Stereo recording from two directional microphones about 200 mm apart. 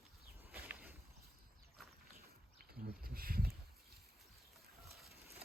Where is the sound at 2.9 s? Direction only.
50° right (ahead or behind).